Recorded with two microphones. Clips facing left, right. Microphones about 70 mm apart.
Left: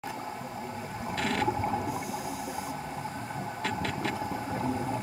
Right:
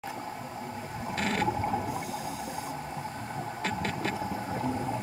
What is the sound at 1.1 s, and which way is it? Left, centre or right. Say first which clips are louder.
Boat: even; right.